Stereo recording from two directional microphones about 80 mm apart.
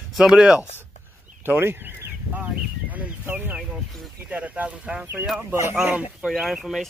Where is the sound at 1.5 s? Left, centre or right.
Right.